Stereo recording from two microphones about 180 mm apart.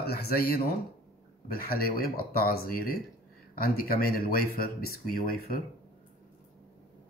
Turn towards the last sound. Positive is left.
turn(degrees=55)  # may be behind; listen again after turning